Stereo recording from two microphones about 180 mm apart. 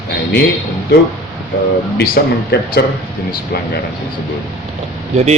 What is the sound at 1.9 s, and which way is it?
Speech, 60° left (ahead or behind).